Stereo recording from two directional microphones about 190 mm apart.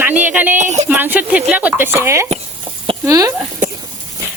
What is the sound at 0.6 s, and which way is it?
Speech, 40° right (ahead or behind).